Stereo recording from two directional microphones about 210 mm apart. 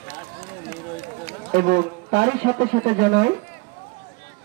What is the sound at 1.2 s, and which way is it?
A man's voice, 40° right (ahead or behind).